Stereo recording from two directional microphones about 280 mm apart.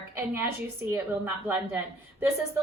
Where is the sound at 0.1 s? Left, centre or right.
Centre.